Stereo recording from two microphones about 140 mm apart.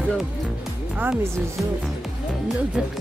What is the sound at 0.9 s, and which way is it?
Speech, 10° right (ahead or behind).